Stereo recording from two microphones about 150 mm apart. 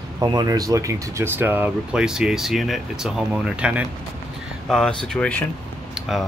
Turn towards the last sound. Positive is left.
turn(degrees=0)  # may be behind; listen again after turning